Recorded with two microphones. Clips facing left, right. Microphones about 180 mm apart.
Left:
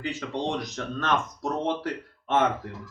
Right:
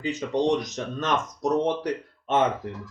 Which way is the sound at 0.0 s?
20° right (ahead or behind).